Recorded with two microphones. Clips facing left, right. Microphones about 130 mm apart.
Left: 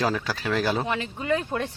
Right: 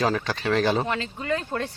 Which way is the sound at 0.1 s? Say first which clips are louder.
Right 2 dB; 10° left (ahead or behind).